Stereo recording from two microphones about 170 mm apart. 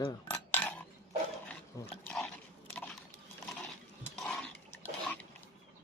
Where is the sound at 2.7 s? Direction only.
5° left (ahead or behind).